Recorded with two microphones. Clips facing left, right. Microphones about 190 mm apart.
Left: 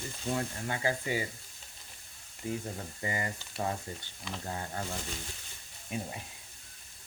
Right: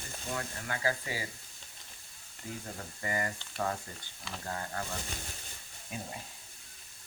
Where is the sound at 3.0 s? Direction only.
20° left (ahead or behind).